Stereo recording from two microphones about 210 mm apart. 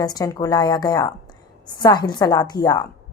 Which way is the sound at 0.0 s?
20° left (ahead or behind).